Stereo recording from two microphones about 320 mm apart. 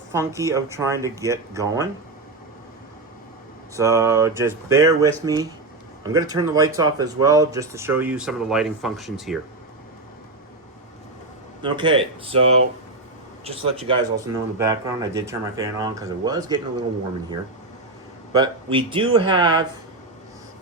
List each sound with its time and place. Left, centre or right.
0.1 s speech: centre
3.8 s speech: centre
11.6 s speech: centre
18.3 s speech: centre